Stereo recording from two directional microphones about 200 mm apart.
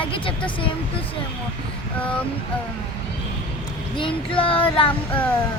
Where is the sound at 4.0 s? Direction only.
25° left (ahead or behind).